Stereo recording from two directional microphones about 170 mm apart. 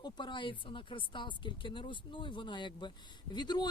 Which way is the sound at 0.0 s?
25° left (ahead or behind).